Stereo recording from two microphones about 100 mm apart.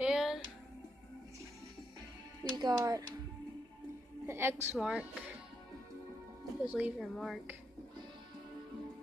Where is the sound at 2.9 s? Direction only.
40° right (ahead or behind).